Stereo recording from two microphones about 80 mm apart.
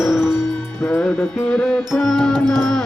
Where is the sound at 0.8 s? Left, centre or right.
Centre.